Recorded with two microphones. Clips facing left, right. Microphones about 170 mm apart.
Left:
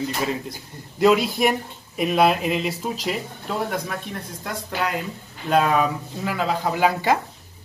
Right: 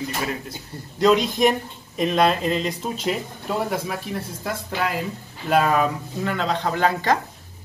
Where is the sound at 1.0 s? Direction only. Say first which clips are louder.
Even; 5° left (ahead or behind).